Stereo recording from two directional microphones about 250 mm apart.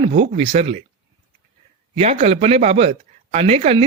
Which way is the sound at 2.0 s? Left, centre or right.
Right.